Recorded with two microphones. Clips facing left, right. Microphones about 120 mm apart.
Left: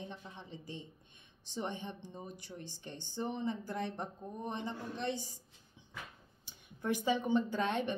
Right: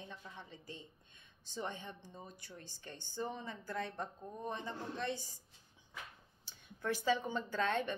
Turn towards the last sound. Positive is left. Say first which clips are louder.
# left 2 dB
turn(degrees=15)  # may be behind; listen again after turning